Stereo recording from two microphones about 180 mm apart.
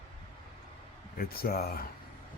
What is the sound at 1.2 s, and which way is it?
Speech, 55° left (ahead or behind).